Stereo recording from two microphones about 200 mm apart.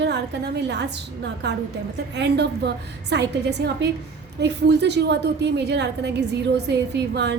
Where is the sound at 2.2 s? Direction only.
60° right (ahead or behind).